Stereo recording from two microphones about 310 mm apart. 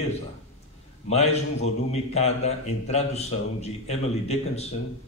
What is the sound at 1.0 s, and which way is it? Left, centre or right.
A man's voice, left.